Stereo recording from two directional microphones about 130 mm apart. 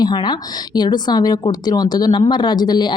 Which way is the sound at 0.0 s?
35° left (ahead or behind).